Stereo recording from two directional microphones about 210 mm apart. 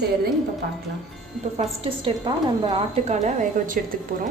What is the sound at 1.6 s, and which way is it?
A woman's voice, 25° right (ahead or behind).